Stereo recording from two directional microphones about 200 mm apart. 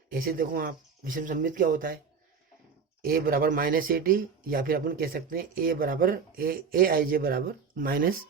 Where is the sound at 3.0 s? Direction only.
45° right (ahead or behind).